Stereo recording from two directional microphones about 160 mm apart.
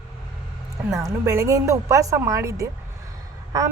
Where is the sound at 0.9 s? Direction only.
20° right (ahead or behind).